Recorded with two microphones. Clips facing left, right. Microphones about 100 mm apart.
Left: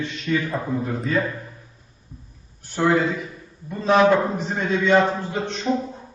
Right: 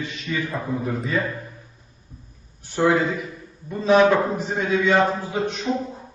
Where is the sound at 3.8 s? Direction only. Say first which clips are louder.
Even; centre (ahead or behind).